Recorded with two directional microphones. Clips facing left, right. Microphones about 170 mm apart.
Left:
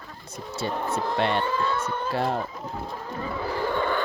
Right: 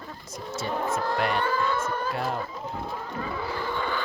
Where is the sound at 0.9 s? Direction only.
30° left (ahead or behind).